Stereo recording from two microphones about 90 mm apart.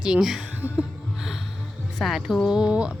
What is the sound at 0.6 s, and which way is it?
Music, 25° left (ahead or behind).